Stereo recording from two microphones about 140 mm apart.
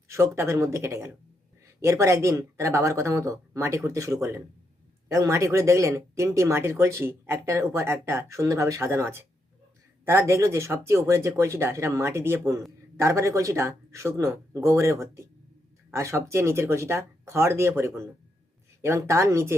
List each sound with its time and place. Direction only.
0.1 s speech: 20° right (ahead or behind)